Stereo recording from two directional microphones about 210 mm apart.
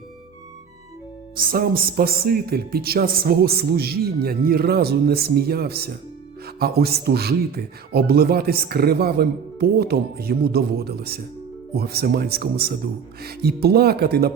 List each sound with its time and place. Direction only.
1.4 s speech: 45° right (ahead or behind)